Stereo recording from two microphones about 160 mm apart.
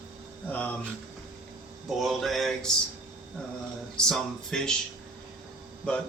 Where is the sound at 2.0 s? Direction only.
Centre (ahead or behind).